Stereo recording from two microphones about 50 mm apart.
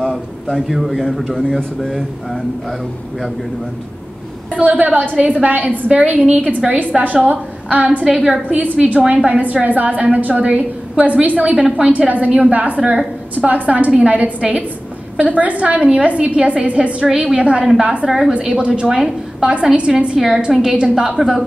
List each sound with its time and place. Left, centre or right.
0.0 s a man's voice: centre
4.6 s a woman's voice: right
6.6 s a woman's voice: centre
7.0 s a woman's voice: right
8.0 s a woman's voice: centre
8.5 s a woman's voice: right
17.6 s a woman's voice: centre
18.6 s a woman's voice: centre
20.2 s a woman's voice: centre
20.7 s a woman's voice: centre